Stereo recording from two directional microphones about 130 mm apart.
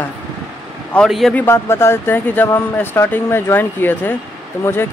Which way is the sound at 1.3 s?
20° left (ahead or behind).